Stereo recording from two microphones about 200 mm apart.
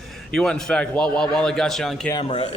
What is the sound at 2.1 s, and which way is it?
Speech, 30° left (ahead or behind).